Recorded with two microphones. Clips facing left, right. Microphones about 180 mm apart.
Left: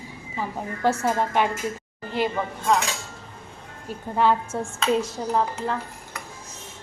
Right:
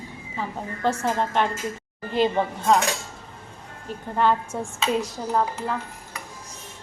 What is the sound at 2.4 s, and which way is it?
Speech, 30° right (ahead or behind).